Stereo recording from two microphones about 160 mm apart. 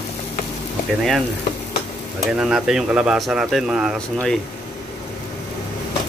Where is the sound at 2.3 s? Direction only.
5° right (ahead or behind).